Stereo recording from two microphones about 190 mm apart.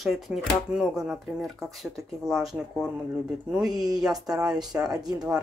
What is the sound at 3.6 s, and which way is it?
Speech, 20° right (ahead or behind).